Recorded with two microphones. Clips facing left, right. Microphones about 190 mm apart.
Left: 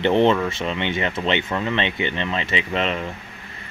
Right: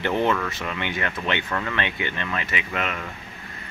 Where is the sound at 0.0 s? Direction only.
25° left (ahead or behind).